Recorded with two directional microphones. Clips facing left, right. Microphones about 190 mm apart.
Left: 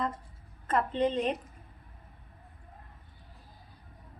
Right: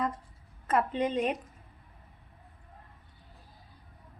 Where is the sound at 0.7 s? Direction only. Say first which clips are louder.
Even; 10° right (ahead or behind).